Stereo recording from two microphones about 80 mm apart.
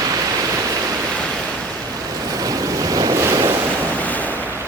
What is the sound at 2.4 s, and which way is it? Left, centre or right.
Waves, right.